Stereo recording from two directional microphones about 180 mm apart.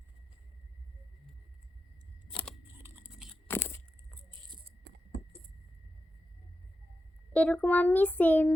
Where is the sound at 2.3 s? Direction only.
5° left (ahead or behind).